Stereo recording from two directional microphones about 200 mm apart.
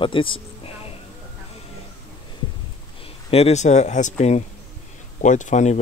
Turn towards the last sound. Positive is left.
turn(degrees=35)  # may be behind; listen again after turning